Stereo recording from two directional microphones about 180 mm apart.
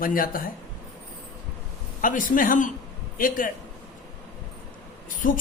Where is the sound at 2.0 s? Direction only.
50° left (ahead or behind).